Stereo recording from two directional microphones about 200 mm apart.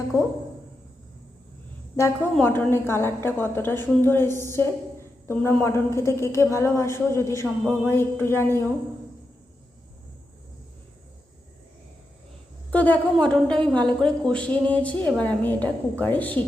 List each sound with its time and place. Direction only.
0.1 s a woman's voice: 15° left (ahead or behind)
2.3 s a woman's voice: 10° left (ahead or behind)
12.7 s a woman's voice: 10° left (ahead or behind)